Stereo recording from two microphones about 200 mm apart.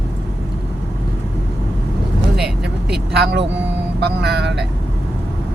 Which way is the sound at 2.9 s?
55° right (ahead or behind).